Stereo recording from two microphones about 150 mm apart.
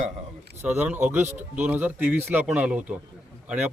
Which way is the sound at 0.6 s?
10° right (ahead or behind).